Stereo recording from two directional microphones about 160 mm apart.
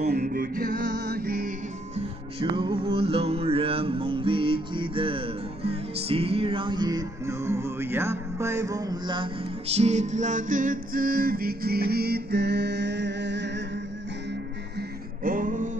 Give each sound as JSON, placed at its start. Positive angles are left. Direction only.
{"t": 0.1, "sound": "music", "side_deg": -65}
{"t": 2.5, "sound": "music", "side_deg": -35}
{"t": 14.8, "sound": "music", "side_deg": -60}